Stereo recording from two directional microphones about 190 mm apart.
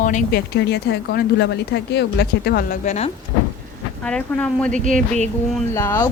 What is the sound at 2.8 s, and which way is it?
Speech, 35° left (ahead or behind).